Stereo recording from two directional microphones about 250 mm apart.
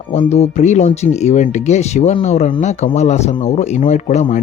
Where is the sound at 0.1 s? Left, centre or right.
Left.